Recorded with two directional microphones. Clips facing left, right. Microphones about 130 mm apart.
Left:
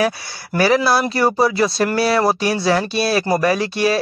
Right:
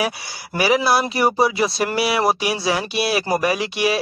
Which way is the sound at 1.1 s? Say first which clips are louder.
Left 2 dB; 25° right (ahead or behind).